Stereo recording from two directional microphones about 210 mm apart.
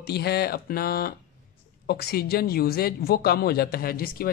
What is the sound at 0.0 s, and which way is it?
Speech, 50° left (ahead or behind).